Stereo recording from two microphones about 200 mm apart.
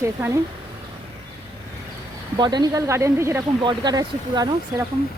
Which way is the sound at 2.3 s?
20° right (ahead or behind).